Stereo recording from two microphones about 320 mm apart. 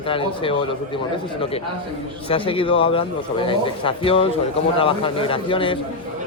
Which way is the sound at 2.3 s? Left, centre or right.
Centre.